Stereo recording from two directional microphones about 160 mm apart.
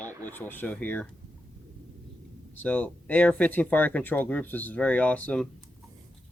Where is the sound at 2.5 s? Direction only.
10° left (ahead or behind).